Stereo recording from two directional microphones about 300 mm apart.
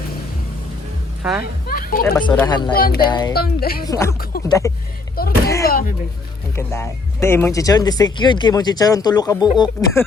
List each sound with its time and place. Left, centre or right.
1.2 s speech: centre
1.6 s a sound: left
2.2 s speech: centre
2.7 s speech: left
3.1 s speech: centre
3.3 s speech: left
3.8 s speech: centre
4.2 s speech: left
4.4 s speech: centre
5.2 s speech: left
6.6 s speech: centre